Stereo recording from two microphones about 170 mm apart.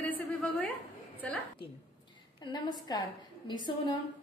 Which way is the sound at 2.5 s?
25° left (ahead or behind).